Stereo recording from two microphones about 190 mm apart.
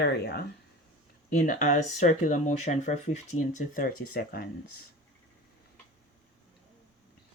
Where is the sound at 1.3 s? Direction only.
40° left (ahead or behind).